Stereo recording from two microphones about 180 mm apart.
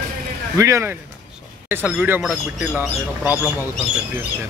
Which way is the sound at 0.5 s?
15° right (ahead or behind).